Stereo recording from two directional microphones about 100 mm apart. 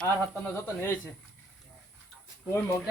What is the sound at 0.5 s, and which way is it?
Speech, 25° left (ahead or behind).